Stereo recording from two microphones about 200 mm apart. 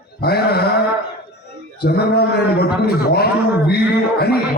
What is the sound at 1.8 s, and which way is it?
A man's voice, 55° left (ahead or behind).